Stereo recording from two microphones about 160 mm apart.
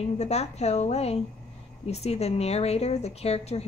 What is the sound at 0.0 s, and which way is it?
Speech, 40° left (ahead or behind).